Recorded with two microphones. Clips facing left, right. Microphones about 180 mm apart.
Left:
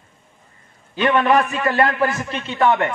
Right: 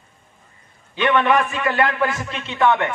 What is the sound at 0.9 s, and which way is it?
A man's voice, 40° left (ahead or behind).